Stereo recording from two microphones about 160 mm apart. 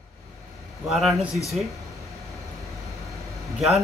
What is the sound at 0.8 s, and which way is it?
Speech, centre (ahead or behind).